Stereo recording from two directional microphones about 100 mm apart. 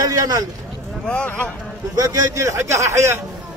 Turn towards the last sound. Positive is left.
turn(degrees=-30)  # may be behind; listen again after turning